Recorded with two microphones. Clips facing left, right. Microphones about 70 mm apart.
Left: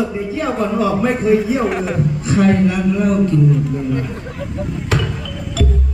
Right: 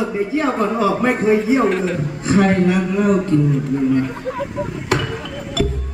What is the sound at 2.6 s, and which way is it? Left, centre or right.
Speech, right.